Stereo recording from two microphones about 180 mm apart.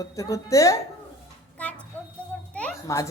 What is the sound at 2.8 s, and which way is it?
Speech, 20° left (ahead or behind).